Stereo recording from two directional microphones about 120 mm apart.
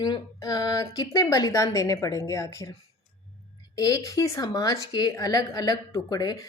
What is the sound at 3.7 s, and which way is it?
Speech, 30° left (ahead or behind).